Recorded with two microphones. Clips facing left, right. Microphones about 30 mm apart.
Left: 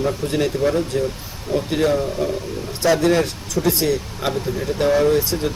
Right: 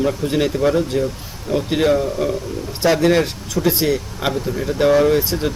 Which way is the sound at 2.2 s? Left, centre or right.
Centre.